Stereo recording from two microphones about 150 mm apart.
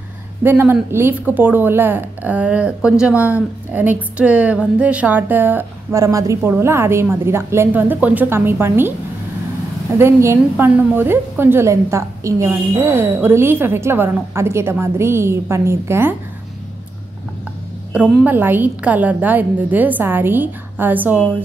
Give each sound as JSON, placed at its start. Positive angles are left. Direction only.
{"t": 0.4, "sound": "speech", "side_deg": -15}
{"t": 9.9, "sound": "speech", "side_deg": -15}
{"t": 18.2, "sound": "speech", "side_deg": -15}